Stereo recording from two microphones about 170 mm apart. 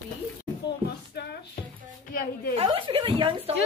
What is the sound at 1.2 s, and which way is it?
Music, 75° left (ahead or behind).